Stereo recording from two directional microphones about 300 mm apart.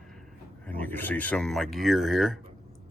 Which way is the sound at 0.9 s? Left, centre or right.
Centre.